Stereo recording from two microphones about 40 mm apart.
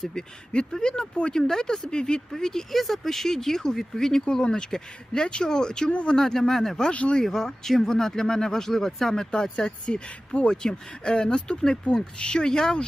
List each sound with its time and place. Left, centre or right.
0.0 s speech: centre
5.9 s speech: left
6.1 s speech: centre
6.9 s speech: left
7.2 s speech: centre